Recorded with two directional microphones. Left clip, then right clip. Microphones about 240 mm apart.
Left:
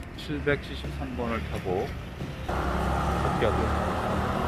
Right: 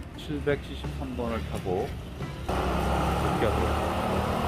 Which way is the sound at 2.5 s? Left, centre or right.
Right.